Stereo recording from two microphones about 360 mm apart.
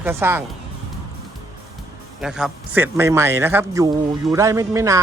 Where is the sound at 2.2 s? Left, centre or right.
Centre.